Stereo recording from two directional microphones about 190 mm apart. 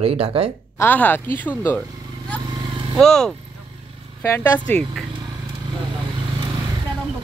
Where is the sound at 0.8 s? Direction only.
10° left (ahead or behind).